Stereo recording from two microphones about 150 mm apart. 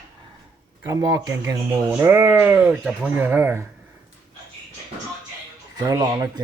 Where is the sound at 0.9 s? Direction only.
25° right (ahead or behind).